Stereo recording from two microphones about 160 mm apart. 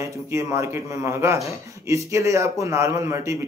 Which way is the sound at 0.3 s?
20° right (ahead or behind).